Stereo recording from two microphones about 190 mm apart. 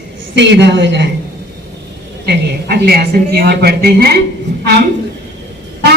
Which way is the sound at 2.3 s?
55° right (ahead or behind).